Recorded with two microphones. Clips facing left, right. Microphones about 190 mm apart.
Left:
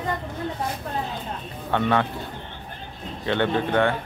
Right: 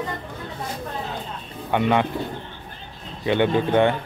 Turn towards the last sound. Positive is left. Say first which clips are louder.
# right 3 dB
turn(degrees=-15)  # may be behind; listen again after turning